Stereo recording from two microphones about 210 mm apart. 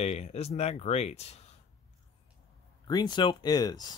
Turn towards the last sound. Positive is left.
turn(degrees=20)  # may be behind; listen again after turning